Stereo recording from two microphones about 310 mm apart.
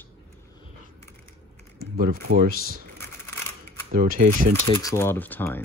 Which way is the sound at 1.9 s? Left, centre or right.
Right.